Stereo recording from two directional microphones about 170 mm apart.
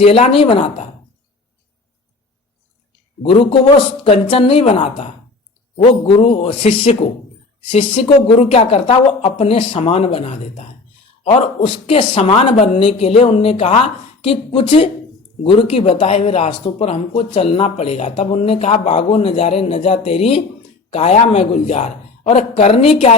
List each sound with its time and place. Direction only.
0.0 s speech: 35° left (ahead or behind)
3.2 s speech: 35° left (ahead or behind)